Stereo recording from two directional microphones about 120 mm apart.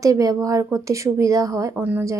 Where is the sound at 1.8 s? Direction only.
15° right (ahead or behind).